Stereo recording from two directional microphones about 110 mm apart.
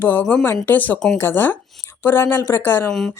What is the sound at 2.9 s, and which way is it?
Speech, 5° left (ahead or behind).